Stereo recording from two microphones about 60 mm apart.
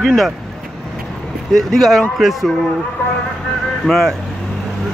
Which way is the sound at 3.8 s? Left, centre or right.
Centre.